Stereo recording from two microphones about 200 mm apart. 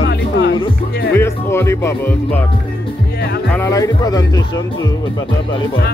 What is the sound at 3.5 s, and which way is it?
Speech, 15° left (ahead or behind).